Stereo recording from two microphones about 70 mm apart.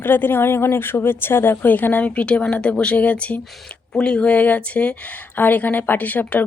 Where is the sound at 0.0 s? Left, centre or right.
Left.